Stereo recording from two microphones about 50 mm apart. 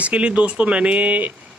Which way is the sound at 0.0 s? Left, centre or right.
Right.